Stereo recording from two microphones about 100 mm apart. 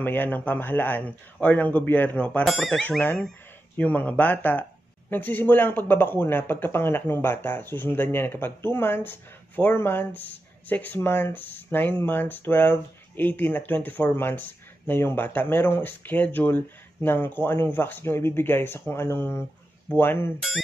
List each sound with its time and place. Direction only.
0.0 s speech: 20° left (ahead or behind)
2.4 s speech: centre (ahead or behind)
3.0 s speech: 20° left (ahead or behind)